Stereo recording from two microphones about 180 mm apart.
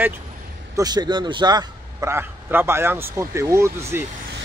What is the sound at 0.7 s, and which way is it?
A man's voice, 20° right (ahead or behind).